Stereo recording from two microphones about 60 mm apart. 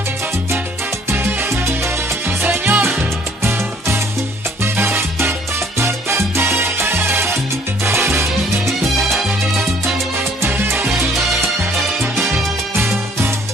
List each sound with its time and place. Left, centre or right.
1.1 s salsa music: right
2.2 s music: right
4.7 s salsa music: right
10.5 s music: right
12.7 s music: right